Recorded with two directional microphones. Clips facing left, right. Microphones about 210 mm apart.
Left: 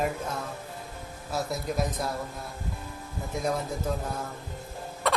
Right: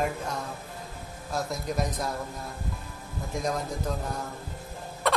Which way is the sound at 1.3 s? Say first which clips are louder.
Even; 5° left (ahead or behind).